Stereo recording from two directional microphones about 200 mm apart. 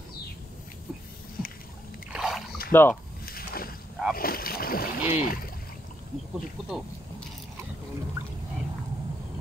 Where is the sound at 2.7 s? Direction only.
10° left (ahead or behind).